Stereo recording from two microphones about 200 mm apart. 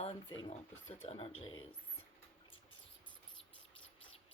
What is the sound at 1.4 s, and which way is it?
Speech, 90° left.